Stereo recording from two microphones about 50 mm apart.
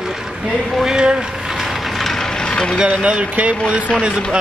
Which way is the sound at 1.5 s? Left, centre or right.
Centre.